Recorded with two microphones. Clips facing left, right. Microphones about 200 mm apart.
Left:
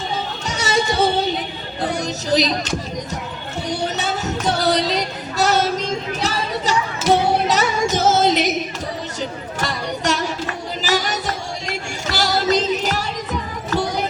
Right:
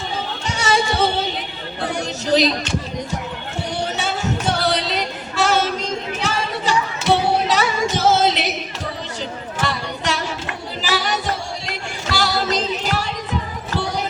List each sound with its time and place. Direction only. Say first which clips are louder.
0.4 s a sound: right 1 dB; 40° left (ahead or behind)
2.0 s music: right 3 dB; 40° left (ahead or behind)
4.2 s music: even; 40° left (ahead or behind)
5.4 s female singing: left 1 dB; 40° left (ahead or behind)
6.1 s music: left 1 dB; 40° left (ahead or behind)
9.6 s a sound: even; 40° left (ahead or behind)
12.0 s music: left 2 dB; 40° left (ahead or behind)